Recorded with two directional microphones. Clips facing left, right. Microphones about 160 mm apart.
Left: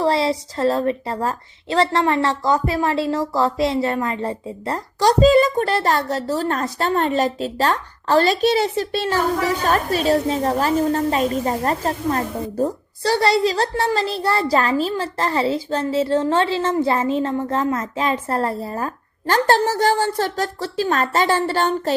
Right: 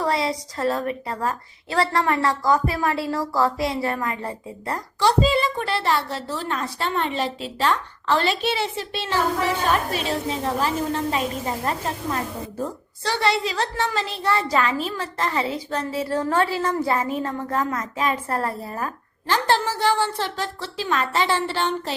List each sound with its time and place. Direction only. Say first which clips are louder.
0.0 s a woman's voice: left 5 dB; 30° left (ahead or behind)
4.9 s a woman's voice: left 6 dB; 40° left (ahead or behind)
19.3 s a woman's voice: left 5 dB; 45° left (ahead or behind)